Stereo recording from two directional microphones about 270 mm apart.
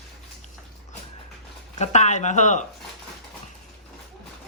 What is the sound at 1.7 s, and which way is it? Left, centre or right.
Speech, left.